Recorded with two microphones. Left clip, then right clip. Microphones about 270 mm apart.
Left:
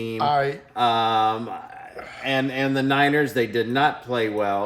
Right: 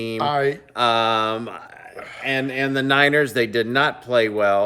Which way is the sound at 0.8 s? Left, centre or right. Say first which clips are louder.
Right 1 dB; centre.